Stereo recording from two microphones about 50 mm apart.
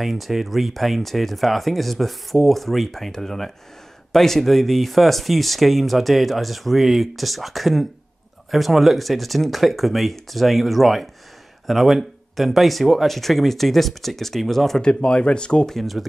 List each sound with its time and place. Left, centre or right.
0.0 s speech: centre
14.8 s speech: centre
15.7 s speech: centre